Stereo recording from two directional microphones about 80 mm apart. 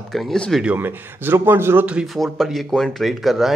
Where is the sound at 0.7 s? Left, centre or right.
Right.